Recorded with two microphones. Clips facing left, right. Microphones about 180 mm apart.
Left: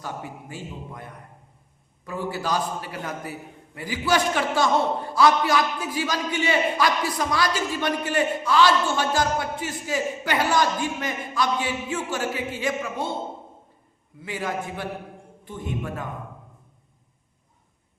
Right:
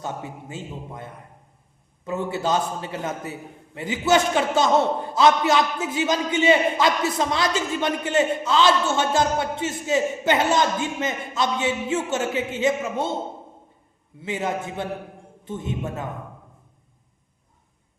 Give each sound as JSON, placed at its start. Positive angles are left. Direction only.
{"t": 0.0, "sound": "a man's voice", "side_deg": -25}
{"t": 14.2, "sound": "a man's voice", "side_deg": -25}